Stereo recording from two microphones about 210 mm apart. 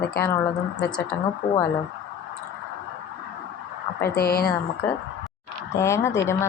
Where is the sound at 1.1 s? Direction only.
10° left (ahead or behind).